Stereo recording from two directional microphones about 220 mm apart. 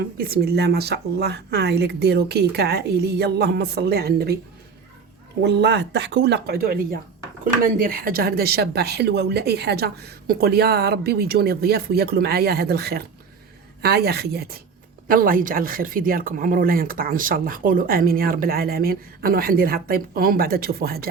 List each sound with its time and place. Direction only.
0.2 s speech: 45° right (ahead or behind)
5.4 s speech: 50° right (ahead or behind)